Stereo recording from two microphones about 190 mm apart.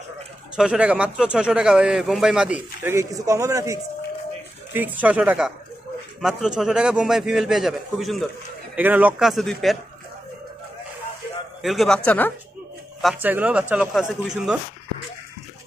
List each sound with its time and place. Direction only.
0.6 s speech: 5° right (ahead or behind)
11.6 s speech: centre (ahead or behind)
13.0 s speech: 10° right (ahead or behind)